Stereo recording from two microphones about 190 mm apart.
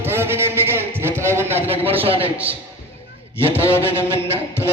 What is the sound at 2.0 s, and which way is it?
Speech, 30° right (ahead or behind).